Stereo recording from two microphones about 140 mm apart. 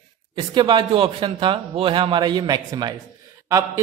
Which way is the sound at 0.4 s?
35° right (ahead or behind).